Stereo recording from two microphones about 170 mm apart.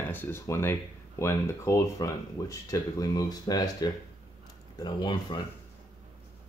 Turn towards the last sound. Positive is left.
turn(degrees=25)  # may be behind; listen again after turning